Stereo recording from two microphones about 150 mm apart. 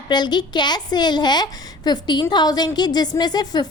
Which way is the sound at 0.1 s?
30° left (ahead or behind).